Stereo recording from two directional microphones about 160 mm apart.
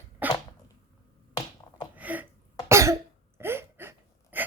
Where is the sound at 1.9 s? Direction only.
10° right (ahead or behind).